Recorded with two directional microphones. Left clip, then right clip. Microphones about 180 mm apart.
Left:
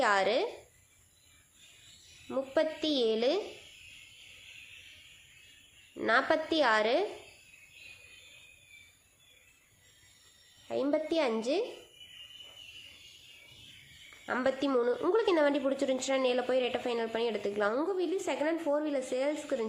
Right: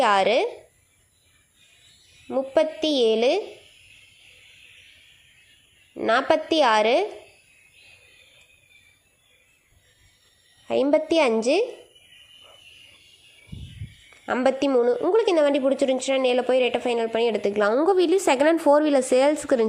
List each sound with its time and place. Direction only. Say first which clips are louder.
0.0 s a woman's voice: right 9 dB; 30° right (ahead or behind)
2.3 s a woman's voice: right 9 dB; 25° right (ahead or behind)
6.0 s a woman's voice: right 7 dB; 25° right (ahead or behind)
10.7 s a woman's voice: right 11 dB; 40° right (ahead or behind)
14.4 s a woman's voice: right 9 dB; 30° right (ahead or behind)
17.9 s a woman's voice: right 13 dB; 50° right (ahead or behind)